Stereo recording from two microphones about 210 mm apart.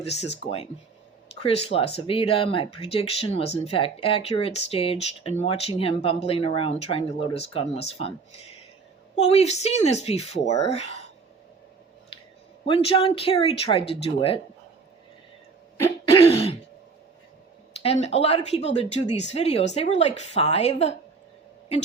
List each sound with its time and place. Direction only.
0.0 s speech: 30° left (ahead or behind)
12.6 s speech: 25° left (ahead or behind)
16.1 s throat clearing: 30° left (ahead or behind)
17.8 s speech: 30° left (ahead or behind)